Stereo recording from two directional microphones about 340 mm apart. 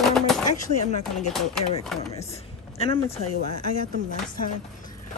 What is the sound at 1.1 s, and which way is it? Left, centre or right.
Speech, centre.